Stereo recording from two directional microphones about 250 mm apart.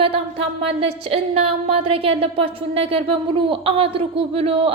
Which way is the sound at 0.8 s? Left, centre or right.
Right.